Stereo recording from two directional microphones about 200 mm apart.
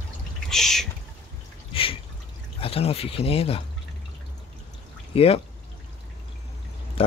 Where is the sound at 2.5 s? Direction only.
30° left (ahead or behind).